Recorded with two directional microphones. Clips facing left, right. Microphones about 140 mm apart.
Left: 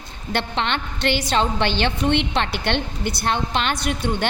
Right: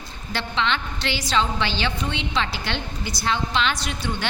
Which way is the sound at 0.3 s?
50° left (ahead or behind).